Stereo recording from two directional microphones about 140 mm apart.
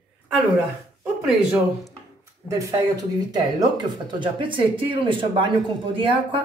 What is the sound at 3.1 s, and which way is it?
Speech, 30° right (ahead or behind).